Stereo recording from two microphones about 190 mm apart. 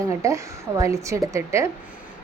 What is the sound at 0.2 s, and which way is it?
A woman's voice, 15° right (ahead or behind).